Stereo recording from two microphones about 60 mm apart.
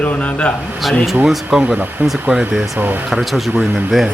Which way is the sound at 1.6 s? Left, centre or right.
Right.